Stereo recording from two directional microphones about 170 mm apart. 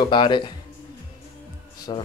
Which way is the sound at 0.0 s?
25° left (ahead or behind).